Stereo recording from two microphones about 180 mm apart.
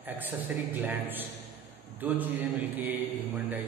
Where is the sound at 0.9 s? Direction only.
10° right (ahead or behind).